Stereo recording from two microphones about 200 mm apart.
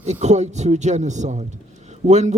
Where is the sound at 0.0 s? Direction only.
35° right (ahead or behind).